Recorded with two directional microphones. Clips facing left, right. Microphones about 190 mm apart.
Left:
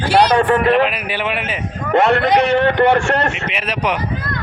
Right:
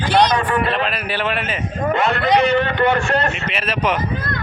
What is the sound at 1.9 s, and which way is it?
A man's voice, 75° left (ahead or behind).